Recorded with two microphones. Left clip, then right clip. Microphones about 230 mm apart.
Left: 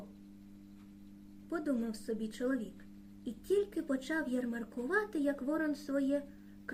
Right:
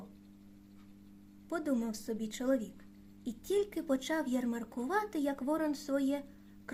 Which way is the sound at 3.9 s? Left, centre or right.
Right.